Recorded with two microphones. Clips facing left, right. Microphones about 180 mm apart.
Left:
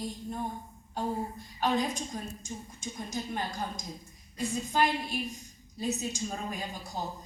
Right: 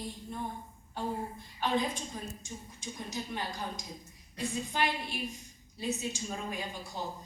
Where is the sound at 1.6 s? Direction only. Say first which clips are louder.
Left 2 dB; 45° left (ahead or behind).